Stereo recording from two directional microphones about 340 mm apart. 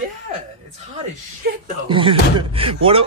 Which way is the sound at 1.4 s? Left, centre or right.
Right.